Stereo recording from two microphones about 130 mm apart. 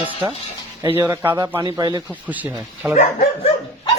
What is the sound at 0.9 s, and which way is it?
Speech, 15° right (ahead or behind).